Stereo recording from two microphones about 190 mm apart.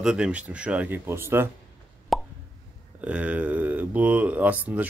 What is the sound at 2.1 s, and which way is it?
Plop, centre (ahead or behind).